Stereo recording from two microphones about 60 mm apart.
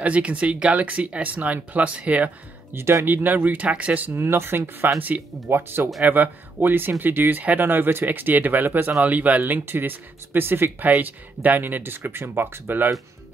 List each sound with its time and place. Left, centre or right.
0.0 s speech: right
2.7 s speech: right
3.1 s speech: right
4.1 s speech: right